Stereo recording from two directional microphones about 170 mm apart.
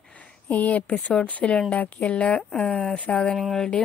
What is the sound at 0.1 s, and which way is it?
Speech, 10° left (ahead or behind).